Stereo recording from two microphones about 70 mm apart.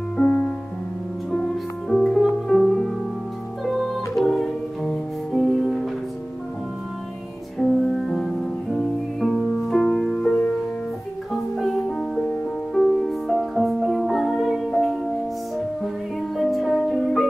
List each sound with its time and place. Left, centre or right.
0.2 s music: centre
1.3 s music: centre
7.5 s music: centre
11.5 s music: centre
16.3 s music: centre